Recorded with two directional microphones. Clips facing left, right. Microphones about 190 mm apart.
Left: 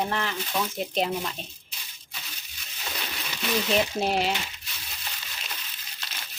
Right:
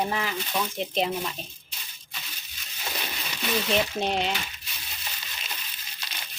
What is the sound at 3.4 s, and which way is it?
Speech, centre (ahead or behind).